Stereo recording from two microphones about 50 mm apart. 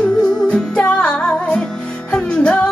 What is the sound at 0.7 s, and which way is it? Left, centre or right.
Music, left.